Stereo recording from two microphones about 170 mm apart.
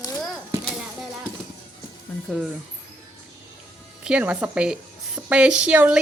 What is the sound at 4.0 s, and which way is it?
A woman's voice, 5° right (ahead or behind).